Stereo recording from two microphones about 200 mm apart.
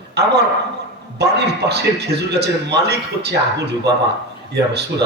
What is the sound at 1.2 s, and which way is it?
A man's voice, 55° right (ahead or behind).